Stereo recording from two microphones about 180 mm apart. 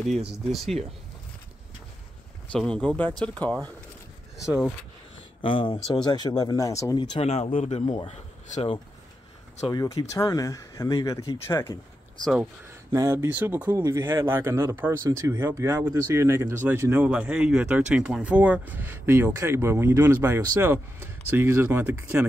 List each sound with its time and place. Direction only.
0.2 s speech: centre (ahead or behind)
2.5 s speech: 5° left (ahead or behind)
5.4 s speech: 30° left (ahead or behind)
7.8 s speech: 20° left (ahead or behind)
8.1 s speech: 40° left (ahead or behind)
9.7 s speech: 20° left (ahead or behind)
12.9 s speech: 15° right (ahead or behind)